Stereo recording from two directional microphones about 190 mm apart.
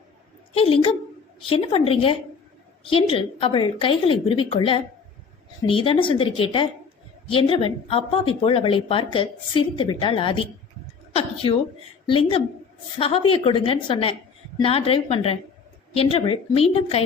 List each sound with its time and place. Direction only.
0.5 s a woman's voice: 30° left (ahead or behind)